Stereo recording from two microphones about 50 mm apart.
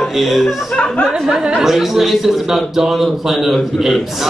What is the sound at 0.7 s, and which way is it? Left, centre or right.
Speech, left.